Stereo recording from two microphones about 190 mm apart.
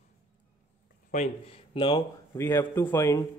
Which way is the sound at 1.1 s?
40° left (ahead or behind).